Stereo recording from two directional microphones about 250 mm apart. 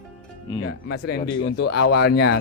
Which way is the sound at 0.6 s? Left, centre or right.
Left.